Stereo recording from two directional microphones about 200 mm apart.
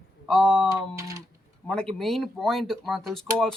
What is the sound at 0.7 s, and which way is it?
Speech, 15° right (ahead or behind).